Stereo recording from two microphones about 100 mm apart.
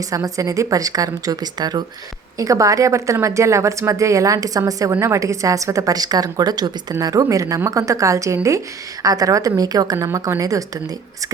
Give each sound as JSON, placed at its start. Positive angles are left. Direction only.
{"t": 0.1, "sound": "a woman's voice", "side_deg": -35}